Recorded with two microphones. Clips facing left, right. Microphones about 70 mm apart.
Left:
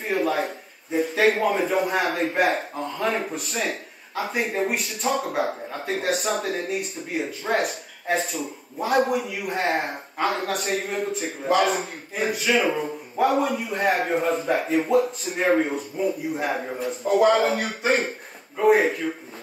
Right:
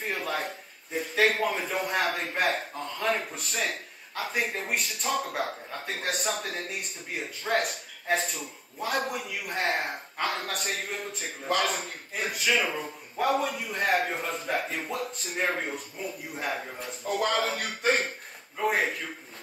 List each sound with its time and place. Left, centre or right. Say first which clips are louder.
0.1 s a man's voice: left 10 dB; centre
14.9 s a man's voice: left 12 dB; centre